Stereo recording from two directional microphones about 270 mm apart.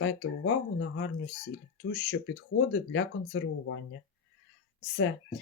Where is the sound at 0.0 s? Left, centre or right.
Left.